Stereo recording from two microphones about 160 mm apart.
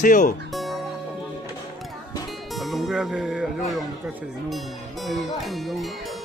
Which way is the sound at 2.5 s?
Centre (ahead or behind).